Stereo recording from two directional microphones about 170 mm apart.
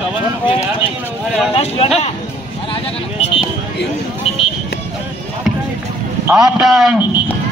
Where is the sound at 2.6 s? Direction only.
35° left (ahead or behind).